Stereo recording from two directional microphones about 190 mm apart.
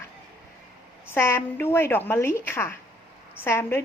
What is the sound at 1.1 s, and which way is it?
A woman's voice, 10° left (ahead or behind).